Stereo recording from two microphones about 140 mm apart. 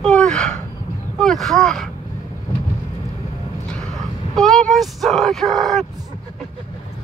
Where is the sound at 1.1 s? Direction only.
Centre (ahead or behind).